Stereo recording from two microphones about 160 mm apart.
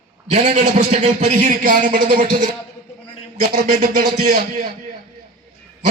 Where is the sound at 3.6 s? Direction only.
65° right (ahead or behind).